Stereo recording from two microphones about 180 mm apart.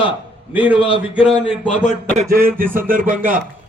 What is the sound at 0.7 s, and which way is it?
Speech, 30° left (ahead or behind).